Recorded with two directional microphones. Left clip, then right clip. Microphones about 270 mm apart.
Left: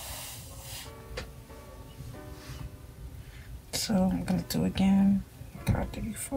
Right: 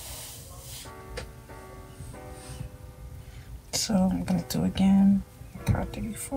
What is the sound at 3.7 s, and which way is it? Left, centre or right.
Speech, centre.